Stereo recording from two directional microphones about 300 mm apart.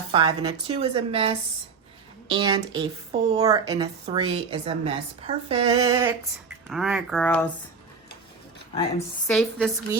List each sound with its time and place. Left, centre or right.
0.1 s a woman's voice: centre
6.7 s speech: centre
9.2 s speech: centre